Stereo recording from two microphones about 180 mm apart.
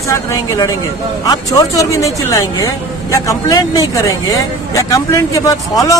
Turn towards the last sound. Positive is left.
turn(degrees=20)  # may be behind; listen again after turning